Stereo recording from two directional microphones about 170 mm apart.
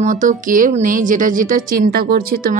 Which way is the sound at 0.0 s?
50° right (ahead or behind).